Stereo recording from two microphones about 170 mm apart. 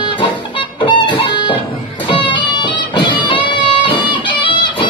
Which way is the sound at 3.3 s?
30° left (ahead or behind).